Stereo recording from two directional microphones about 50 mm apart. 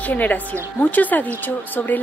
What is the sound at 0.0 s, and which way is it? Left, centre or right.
Speech, left.